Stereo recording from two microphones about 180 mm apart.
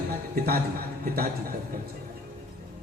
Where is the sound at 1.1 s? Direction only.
55° right (ahead or behind).